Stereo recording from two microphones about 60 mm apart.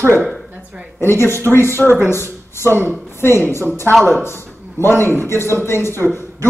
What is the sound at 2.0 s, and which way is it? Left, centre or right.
A woman's voice, left.